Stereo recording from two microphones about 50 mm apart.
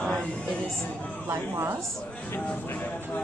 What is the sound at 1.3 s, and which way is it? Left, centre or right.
Speech, right.